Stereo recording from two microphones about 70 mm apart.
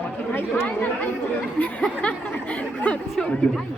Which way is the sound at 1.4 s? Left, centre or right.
Left.